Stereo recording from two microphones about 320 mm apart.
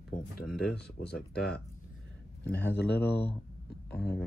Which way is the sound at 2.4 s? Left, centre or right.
Left.